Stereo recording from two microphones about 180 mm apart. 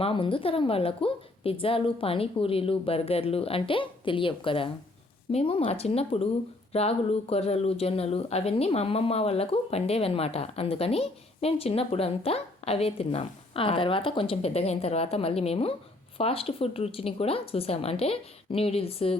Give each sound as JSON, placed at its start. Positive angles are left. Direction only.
{"t": 0.0, "sound": "speech", "side_deg": 30}